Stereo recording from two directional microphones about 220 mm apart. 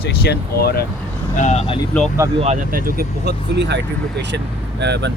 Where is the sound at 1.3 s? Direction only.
30° left (ahead or behind).